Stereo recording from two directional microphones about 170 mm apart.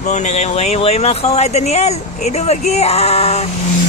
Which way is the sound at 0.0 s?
40° left (ahead or behind).